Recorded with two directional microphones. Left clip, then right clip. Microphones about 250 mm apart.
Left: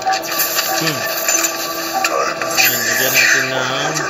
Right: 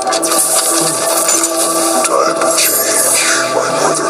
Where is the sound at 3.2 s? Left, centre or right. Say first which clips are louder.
Left 1 dB; right.